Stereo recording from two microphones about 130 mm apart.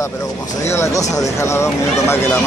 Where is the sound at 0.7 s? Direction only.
20° left (ahead or behind).